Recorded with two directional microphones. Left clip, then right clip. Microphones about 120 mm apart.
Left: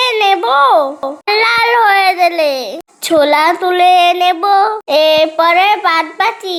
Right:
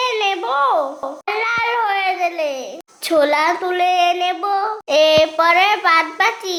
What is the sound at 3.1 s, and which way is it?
A child's voice, 25° left (ahead or behind).